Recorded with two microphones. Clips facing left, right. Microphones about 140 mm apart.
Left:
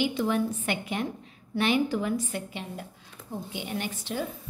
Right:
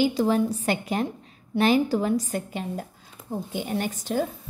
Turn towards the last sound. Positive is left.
turn(degrees=-45)  # may be behind; listen again after turning